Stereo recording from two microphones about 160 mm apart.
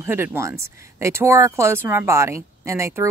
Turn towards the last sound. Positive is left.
turn(degrees=-20)  # may be behind; listen again after turning